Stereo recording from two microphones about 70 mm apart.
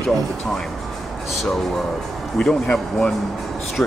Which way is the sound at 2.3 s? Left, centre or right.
Centre.